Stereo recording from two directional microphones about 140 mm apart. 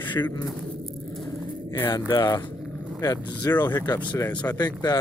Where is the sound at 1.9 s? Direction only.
30° left (ahead or behind).